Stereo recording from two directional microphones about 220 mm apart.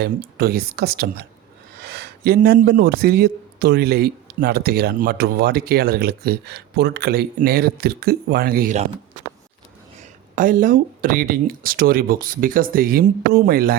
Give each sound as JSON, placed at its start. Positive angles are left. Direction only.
{"t": 0.0, "sound": "a man's voice", "side_deg": -45}
{"t": 10.0, "sound": "speech", "side_deg": -40}